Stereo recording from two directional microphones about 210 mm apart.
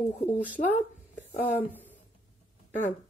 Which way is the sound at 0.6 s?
35° left (ahead or behind).